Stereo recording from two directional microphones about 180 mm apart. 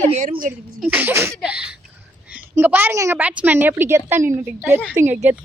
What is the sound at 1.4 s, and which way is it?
Laughter, 5° right (ahead or behind).